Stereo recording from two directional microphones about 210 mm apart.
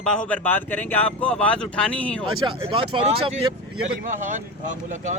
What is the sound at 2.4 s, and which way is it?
Speech, 25° right (ahead or behind).